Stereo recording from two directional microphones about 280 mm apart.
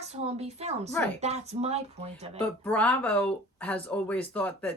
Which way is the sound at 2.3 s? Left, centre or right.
Centre.